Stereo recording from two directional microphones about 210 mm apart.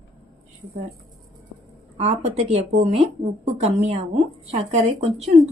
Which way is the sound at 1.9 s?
30° right (ahead or behind).